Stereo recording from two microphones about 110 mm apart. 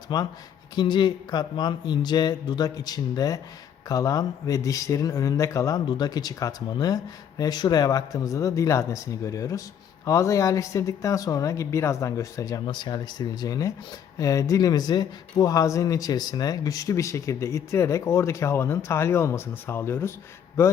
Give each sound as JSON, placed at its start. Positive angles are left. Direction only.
{"t": 0.1, "sound": "speech", "side_deg": 40}
{"t": 12.6, "sound": "speech", "side_deg": 40}